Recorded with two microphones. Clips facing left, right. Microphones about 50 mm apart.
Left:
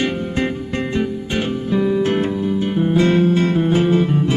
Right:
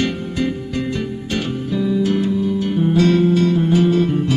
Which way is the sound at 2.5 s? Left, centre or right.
Left.